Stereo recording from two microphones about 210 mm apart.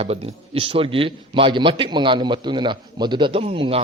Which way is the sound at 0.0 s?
30° right (ahead or behind).